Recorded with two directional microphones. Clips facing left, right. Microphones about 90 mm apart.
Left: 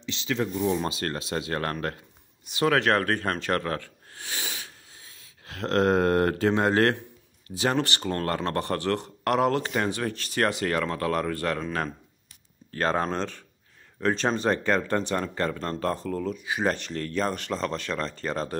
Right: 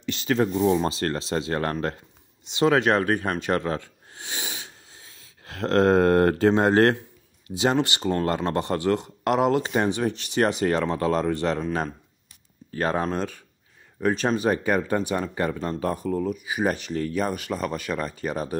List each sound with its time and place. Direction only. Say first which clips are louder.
0.0 s a sound: right 5 dB; 50° right (ahead or behind)
0.7 s speech: right 4 dB; 30° right (ahead or behind)
7.4 s speech: right 3 dB; 20° right (ahead or behind)
12.7 s speech: right 1 dB; 10° right (ahead or behind)